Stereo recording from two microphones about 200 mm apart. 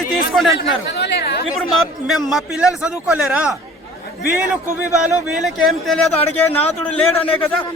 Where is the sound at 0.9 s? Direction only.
55° left (ahead or behind).